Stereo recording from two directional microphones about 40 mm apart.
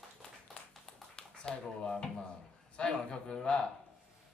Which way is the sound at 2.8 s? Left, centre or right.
Left.